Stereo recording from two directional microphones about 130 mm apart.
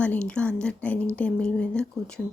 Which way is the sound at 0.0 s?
10° left (ahead or behind).